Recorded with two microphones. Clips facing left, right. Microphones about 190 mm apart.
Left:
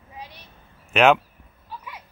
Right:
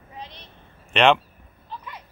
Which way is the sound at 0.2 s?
10° left (ahead or behind).